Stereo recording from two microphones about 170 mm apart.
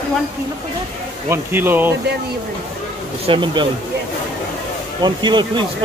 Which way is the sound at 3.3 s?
30° right (ahead or behind).